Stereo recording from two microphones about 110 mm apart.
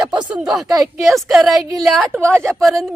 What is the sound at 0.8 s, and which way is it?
Speech, centre (ahead or behind).